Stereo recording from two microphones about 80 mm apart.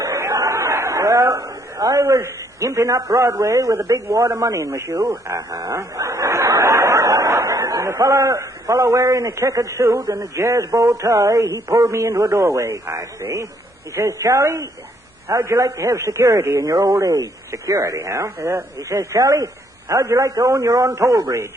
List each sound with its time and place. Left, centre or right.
0.0 s chatter: right
2.0 s a man's voice: right
18.8 s a man's voice: right